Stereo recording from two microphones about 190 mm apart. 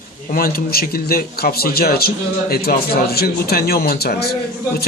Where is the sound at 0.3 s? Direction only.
50° left (ahead or behind).